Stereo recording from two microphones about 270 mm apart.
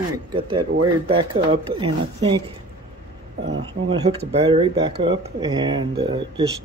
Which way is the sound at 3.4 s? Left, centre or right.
Right.